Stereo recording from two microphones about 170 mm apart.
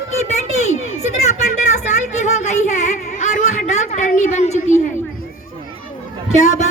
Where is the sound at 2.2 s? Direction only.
45° left (ahead or behind).